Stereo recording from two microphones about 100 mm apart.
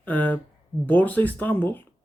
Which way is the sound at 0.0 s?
15° left (ahead or behind).